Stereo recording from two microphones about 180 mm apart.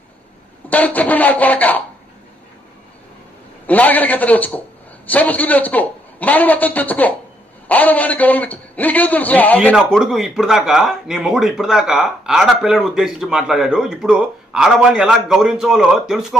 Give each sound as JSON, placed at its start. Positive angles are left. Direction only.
{"t": 0.7, "sound": "a man's voice", "side_deg": 10}
{"t": 3.7, "sound": "a man's voice", "side_deg": 10}
{"t": 9.7, "sound": "speech", "side_deg": 0}